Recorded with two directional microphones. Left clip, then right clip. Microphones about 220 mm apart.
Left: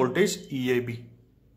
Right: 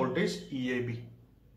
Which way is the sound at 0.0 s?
45° left (ahead or behind).